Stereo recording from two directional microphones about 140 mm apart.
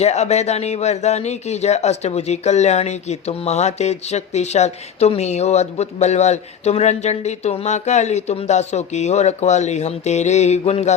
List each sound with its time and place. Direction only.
0.0 s speech: 50° left (ahead or behind)